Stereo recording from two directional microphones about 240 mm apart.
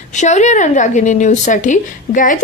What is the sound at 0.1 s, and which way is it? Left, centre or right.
A woman's voice, left.